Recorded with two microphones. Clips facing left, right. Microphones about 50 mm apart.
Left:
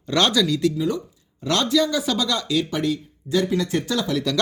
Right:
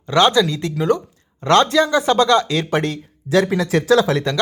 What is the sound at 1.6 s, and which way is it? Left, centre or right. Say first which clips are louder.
Speech: right 5 dB; right.